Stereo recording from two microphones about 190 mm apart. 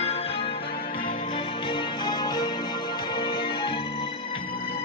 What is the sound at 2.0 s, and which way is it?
Music, 20° left (ahead or behind).